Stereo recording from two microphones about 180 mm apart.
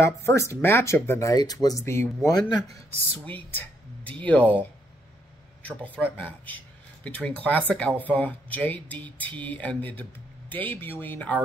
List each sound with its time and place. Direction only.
0.0 s speech: 15° left (ahead or behind)
3.1 s speech: 10° left (ahead or behind)